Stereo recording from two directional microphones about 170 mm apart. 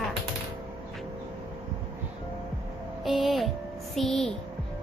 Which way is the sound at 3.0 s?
Centre (ahead or behind).